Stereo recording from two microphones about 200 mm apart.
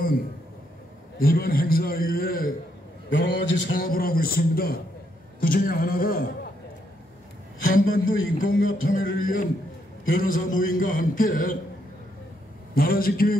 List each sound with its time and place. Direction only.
1.2 s a man's voice: 45° left (ahead or behind)
3.1 s a man's voice: 65° left (ahead or behind)
3.8 s a man's voice: 45° left (ahead or behind)
7.6 s a man's voice: 45° left (ahead or behind)
12.7 s a man's voice: 45° left (ahead or behind)